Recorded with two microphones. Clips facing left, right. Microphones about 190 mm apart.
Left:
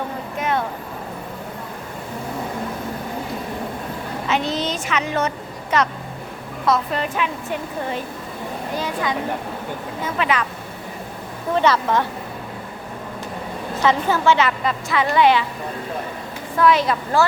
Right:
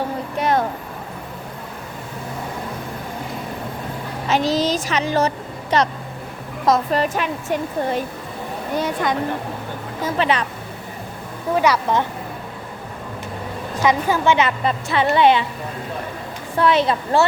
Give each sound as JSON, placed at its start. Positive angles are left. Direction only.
{"t": 0.3, "sound": "a sound", "side_deg": -35}
{"t": 4.3, "sound": "a woman's voice", "side_deg": -40}
{"t": 8.8, "sound": "speech", "side_deg": -50}
{"t": 10.2, "sound": "a woman's voice", "side_deg": -30}
{"t": 11.5, "sound": "a woman's voice", "side_deg": -10}
{"t": 13.8, "sound": "a woman's voice", "side_deg": -15}
{"t": 16.6, "sound": "a woman's voice", "side_deg": -25}